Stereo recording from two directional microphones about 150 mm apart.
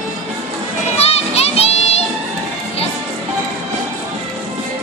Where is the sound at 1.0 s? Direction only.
45° left (ahead or behind).